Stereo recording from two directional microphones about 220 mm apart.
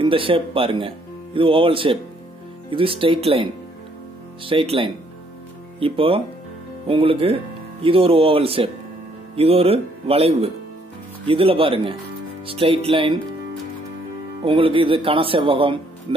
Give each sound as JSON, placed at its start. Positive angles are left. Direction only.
{"t": 0.0, "sound": "speech", "side_deg": -25}
{"t": 4.5, "sound": "speech", "side_deg": -25}
{"t": 14.4, "sound": "speech", "side_deg": -25}